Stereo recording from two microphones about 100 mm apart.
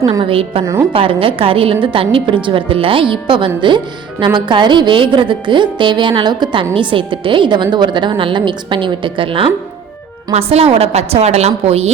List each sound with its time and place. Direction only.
0.2 s a woman's voice: 65° right (ahead or behind)
0.6 s a woman's voice: 30° right (ahead or behind)
0.9 s a woman's voice: 65° right (ahead or behind)
10.3 s a woman's voice: 85° right